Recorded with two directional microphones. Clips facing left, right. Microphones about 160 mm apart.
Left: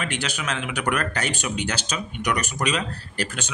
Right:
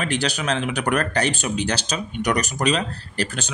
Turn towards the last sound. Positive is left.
turn(degrees=-35)  # may be behind; listen again after turning